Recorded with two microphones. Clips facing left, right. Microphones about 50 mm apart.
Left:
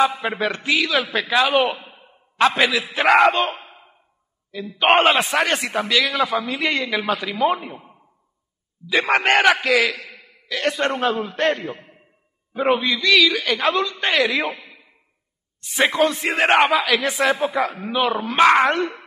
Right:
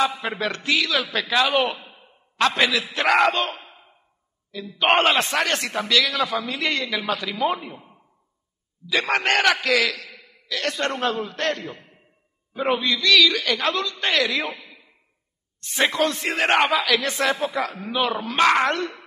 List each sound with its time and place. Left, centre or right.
0.0 s a man's voice: centre
14.5 s a sound: centre
15.6 s a man's voice: centre